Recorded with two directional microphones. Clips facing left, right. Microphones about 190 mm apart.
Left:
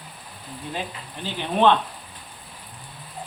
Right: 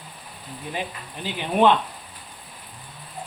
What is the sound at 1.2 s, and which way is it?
Speech, 10° right (ahead or behind).